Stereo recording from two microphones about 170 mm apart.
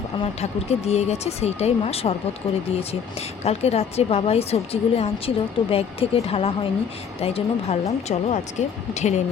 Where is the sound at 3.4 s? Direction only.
40° left (ahead or behind).